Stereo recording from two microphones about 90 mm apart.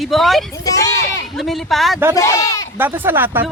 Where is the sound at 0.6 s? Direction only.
40° left (ahead or behind).